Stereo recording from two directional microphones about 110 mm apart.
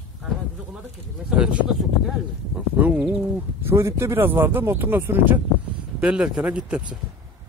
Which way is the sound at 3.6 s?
25° right (ahead or behind).